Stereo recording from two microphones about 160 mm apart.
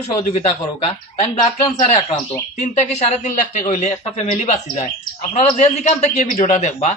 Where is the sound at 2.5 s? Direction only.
50° left (ahead or behind).